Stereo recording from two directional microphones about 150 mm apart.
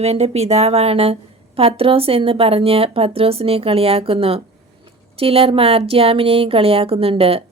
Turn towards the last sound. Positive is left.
turn(degrees=-40)  # may be behind; listen again after turning